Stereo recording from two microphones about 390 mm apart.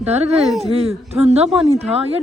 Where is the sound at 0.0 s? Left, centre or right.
Centre.